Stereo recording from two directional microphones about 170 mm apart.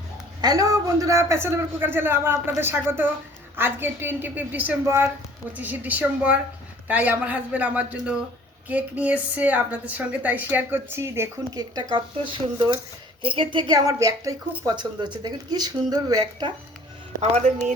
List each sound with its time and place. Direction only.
0.4 s a woman's voice: 20° right (ahead or behind)
17.2 s speech: 45° right (ahead or behind)